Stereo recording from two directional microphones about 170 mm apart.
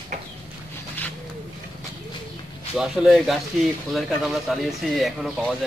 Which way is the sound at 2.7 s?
5° right (ahead or behind).